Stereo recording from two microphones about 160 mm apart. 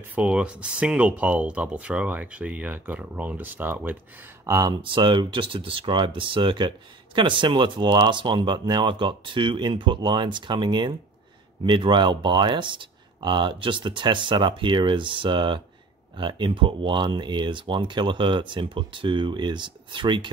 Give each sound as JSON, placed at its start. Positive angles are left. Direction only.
{"t": 0.1, "sound": "speech", "side_deg": -10}
{"t": 4.5, "sound": "speech", "side_deg": -25}